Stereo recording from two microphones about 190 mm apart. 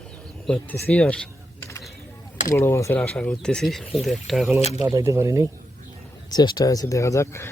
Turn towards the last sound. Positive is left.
turn(degrees=15)  # may be behind; listen again after turning